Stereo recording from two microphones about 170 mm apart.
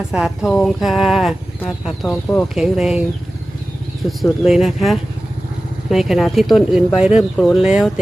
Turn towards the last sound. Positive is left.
turn(degrees=-5)  # may be behind; listen again after turning